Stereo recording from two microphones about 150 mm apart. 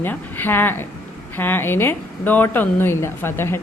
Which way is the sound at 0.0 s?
15° left (ahead or behind).